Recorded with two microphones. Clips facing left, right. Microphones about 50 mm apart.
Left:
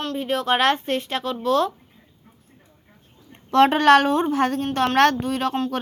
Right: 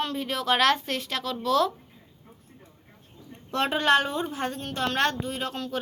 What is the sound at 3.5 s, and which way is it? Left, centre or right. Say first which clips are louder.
A woman's voice: left 8 dB; left.